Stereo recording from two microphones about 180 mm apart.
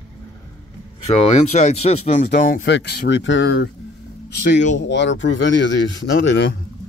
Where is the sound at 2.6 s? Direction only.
70° left (ahead or behind).